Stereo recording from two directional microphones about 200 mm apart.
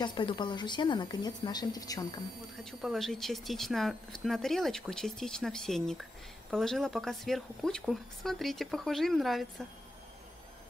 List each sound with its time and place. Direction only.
0.0 s speech: 25° left (ahead or behind)
2.6 s speech: centre (ahead or behind)